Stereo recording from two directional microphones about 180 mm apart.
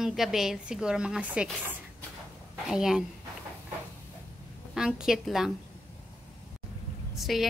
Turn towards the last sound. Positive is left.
turn(degrees=0)  # may be behind; listen again after turning